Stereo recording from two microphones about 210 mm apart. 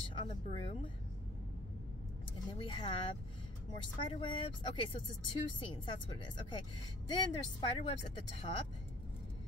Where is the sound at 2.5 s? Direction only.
20° left (ahead or behind).